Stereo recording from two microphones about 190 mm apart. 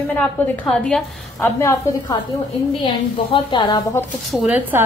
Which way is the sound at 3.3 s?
25° left (ahead or behind).